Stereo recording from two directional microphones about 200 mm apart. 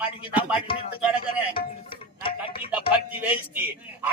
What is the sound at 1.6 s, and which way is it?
Music, 50° left (ahead or behind).